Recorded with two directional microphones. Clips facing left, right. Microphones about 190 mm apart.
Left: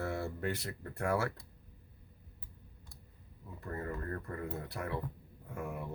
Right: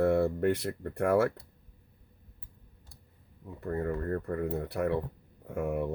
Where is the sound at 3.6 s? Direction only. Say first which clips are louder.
Right 8 dB; 60° right (ahead or behind).